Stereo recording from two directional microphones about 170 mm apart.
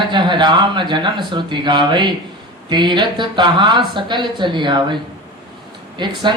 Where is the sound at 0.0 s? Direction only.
25° right (ahead or behind).